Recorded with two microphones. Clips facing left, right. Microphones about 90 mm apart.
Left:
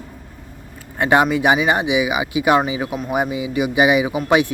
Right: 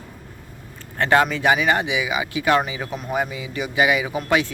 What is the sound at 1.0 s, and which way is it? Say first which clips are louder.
Speech: left 3 dB; 15° left (ahead or behind).